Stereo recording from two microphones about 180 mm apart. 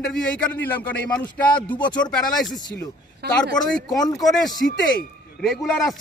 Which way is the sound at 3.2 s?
65° right (ahead or behind).